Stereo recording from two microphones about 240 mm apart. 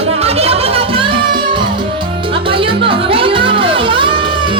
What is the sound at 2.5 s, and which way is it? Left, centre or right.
Music, right.